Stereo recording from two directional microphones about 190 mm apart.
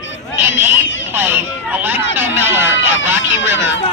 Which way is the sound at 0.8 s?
75° left (ahead or behind).